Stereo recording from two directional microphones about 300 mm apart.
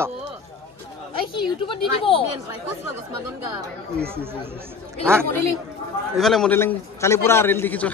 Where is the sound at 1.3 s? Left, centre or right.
Centre.